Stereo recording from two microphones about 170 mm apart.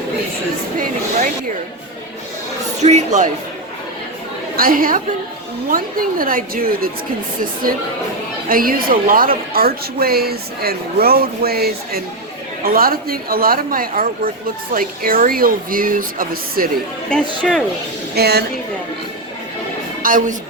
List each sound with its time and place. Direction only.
2.8 s speech: 45° right (ahead or behind)
4.5 s a woman's voice: 55° right (ahead or behind)
8.4 s a woman's voice: 60° right (ahead or behind)
17.1 s speech: 5° left (ahead or behind)
18.1 s a woman's voice: 70° right (ahead or behind)
20.0 s speech: 55° right (ahead or behind)